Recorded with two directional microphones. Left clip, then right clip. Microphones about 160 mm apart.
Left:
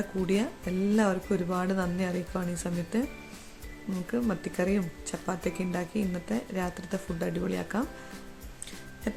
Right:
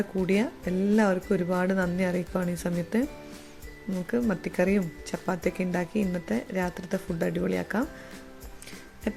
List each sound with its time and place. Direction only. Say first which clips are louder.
0.3 s speech: right 2 dB; 15° right (ahead or behind)
4.1 s speech: right 3 dB; 20° right (ahead or behind)